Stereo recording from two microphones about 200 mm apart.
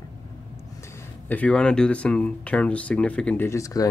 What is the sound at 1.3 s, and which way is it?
Speech, 5° left (ahead or behind).